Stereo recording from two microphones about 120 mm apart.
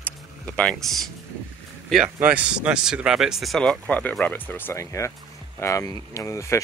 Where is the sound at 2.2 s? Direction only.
10° right (ahead or behind).